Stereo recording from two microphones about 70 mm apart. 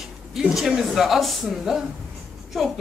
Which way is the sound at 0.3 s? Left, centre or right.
Centre.